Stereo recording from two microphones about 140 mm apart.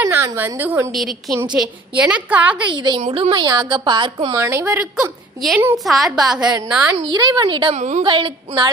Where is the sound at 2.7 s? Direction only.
35° right (ahead or behind).